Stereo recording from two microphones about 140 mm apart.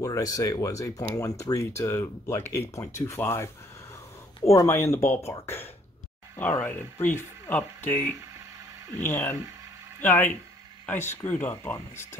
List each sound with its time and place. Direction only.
0.0 s speech: 25° left (ahead or behind)
4.5 s speech: 20° left (ahead or behind)